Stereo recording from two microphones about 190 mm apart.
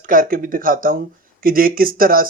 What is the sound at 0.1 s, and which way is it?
Speech, 45° right (ahead or behind).